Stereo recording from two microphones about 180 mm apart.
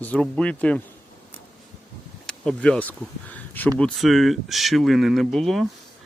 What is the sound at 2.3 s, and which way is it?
Speech, 5° left (ahead or behind).